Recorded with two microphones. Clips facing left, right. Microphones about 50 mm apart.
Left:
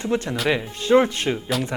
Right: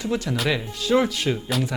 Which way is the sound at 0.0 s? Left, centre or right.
Left.